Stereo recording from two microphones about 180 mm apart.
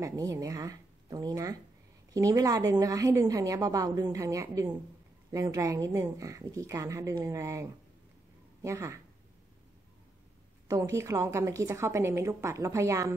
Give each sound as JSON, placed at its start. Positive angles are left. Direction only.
{"t": 0.0, "sound": "a woman's voice", "side_deg": -20}
{"t": 10.7, "sound": "a woman's voice", "side_deg": -15}